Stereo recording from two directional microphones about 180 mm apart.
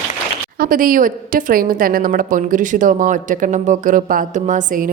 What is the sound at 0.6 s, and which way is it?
A woman's voice, 50° right (ahead or behind).